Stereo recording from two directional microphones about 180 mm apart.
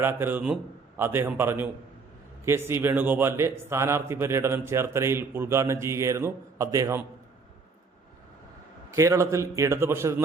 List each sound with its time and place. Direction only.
0.0 s a man's voice: 10° right (ahead or behind)
9.0 s a man's voice: 15° right (ahead or behind)